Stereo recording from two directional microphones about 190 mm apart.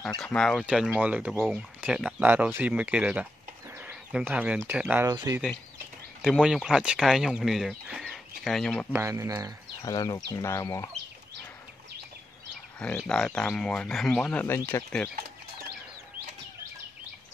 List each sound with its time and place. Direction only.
0.2 s speech: 5° left (ahead or behind)
1.3 s speech: 5° left (ahead or behind)
3.7 s bird: 5° right (ahead or behind)
4.6 s speech: 10° right (ahead or behind)
6.2 s speech: centre (ahead or behind)
8.9 s speech: 15° right (ahead or behind)
9.8 s speech: 20° left (ahead or behind)
12.7 s speech: 5° left (ahead or behind)